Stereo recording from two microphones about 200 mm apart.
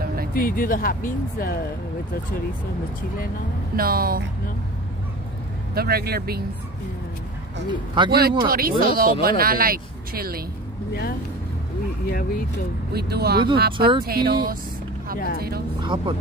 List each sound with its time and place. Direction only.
0.3 s speech: 45° left (ahead or behind)
3.7 s speech: 45° right (ahead or behind)
5.8 s speech: 50° right (ahead or behind)
7.7 s speech: 25° right (ahead or behind)
8.1 s speech: 50° right (ahead or behind)
10.9 s speech: 50° left (ahead or behind)
12.9 s speech: 50° right (ahead or behind)
15.1 s speech: 45° left (ahead or behind)
15.8 s speech: 25° right (ahead or behind)